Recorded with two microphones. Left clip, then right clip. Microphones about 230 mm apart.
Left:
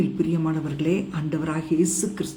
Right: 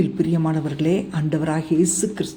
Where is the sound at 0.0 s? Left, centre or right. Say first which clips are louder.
Right 3 dB; centre.